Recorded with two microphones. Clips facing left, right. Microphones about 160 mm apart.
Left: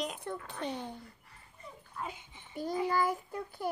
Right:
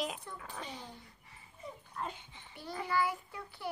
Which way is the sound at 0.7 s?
60° left (ahead or behind).